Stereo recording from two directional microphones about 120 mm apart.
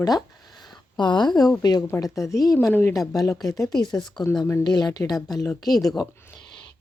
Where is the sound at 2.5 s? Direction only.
15° left (ahead or behind); by 5.1 s 35° left (ahead or behind).